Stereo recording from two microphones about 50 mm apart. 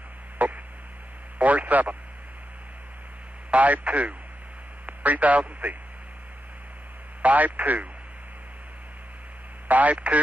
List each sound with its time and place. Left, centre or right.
0.4 s a sound: right
1.4 s speech: right
3.4 s speech: right
7.2 s speech: right
9.7 s speech: right